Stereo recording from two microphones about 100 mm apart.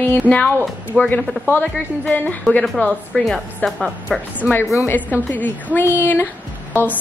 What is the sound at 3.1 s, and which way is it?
A woman's voice, 5° left (ahead or behind).